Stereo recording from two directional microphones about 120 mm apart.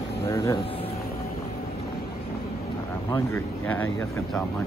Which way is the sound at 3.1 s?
25° left (ahead or behind).